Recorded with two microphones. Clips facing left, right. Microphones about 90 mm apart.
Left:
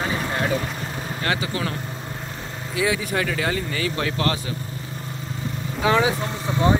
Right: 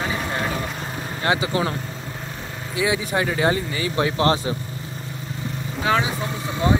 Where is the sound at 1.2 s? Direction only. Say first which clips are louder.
Right 4 dB; 20° right (ahead or behind).